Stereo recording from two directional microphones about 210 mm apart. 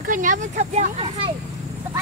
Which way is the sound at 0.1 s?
40° right (ahead or behind).